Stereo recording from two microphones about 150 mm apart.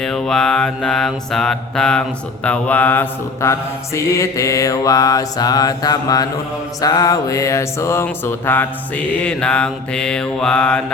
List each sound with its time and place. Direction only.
0.0 s mantra: 5° left (ahead or behind); by 6.2 s 25° left (ahead or behind)
6.8 s a sound: 25° left (ahead or behind)
9.2 s mantra: 10° left (ahead or behind)